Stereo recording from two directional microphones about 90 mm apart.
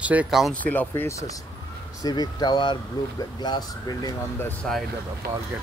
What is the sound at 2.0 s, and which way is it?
Speech, 45° left (ahead or behind).